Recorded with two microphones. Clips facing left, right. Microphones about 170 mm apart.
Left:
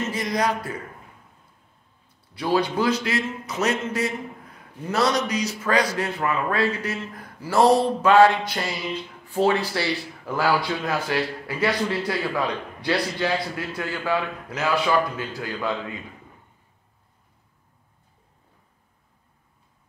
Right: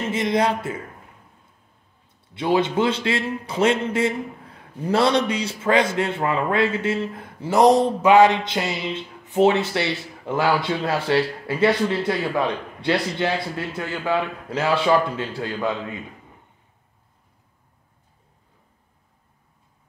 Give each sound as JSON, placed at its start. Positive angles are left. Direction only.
{"t": 0.1, "sound": "speech", "side_deg": -25}
{"t": 2.3, "sound": "speech", "side_deg": -20}